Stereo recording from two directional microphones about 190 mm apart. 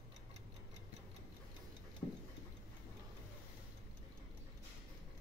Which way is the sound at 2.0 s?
25° left (ahead or behind).